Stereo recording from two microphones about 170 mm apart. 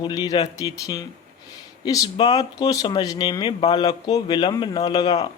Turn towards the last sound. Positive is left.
turn(degrees=25)  # may be behind; listen again after turning